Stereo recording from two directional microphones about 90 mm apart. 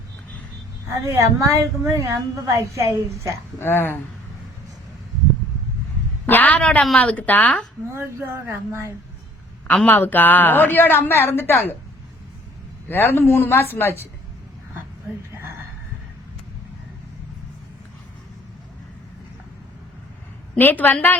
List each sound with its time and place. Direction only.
0.9 s a woman's voice: 30° right (ahead or behind)
3.6 s a woman's voice: 25° left (ahead or behind)
6.2 s a woman's voice: 20° left (ahead or behind)
7.9 s speech: 30° right (ahead or behind)
9.6 s a woman's voice: 15° left (ahead or behind)
12.9 s a woman's voice: 25° left (ahead or behind)
20.6 s a woman's voice: 20° left (ahead or behind)